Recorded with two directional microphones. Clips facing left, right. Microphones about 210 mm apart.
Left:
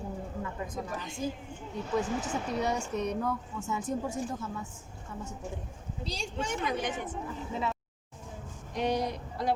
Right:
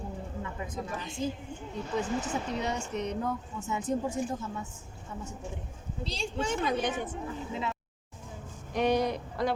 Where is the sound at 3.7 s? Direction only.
20° right (ahead or behind).